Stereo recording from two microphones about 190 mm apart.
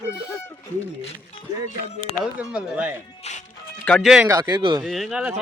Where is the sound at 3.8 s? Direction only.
5° left (ahead or behind).